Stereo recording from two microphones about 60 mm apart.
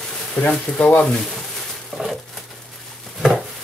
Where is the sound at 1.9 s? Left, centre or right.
Centre.